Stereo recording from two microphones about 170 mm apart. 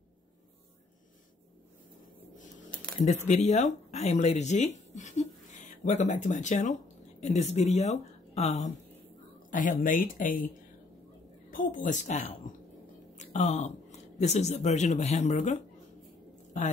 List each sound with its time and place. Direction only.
3.3 s speech: 40° left (ahead or behind)
9.5 s speech: 50° left (ahead or behind)
11.5 s a woman's voice: 50° left (ahead or behind)